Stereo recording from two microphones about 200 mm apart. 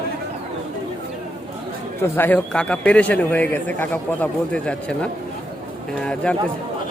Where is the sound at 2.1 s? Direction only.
10° left (ahead or behind).